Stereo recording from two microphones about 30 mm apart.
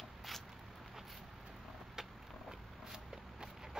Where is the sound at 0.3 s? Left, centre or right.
Centre.